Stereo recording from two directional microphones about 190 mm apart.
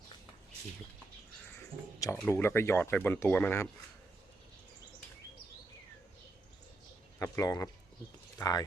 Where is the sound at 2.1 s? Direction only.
10° left (ahead or behind).